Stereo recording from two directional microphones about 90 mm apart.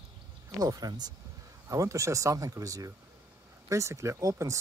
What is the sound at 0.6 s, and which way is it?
Speech, 45° right (ahead or behind).